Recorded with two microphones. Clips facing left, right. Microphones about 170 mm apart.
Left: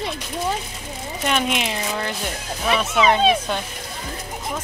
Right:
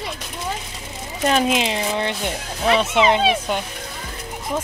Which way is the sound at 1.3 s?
35° right (ahead or behind).